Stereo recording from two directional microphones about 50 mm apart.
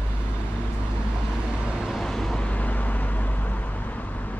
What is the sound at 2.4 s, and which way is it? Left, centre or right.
Vehicle, left.